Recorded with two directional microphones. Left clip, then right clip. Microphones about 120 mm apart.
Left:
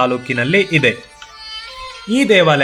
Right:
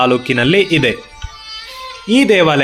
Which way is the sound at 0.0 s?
50° right (ahead or behind).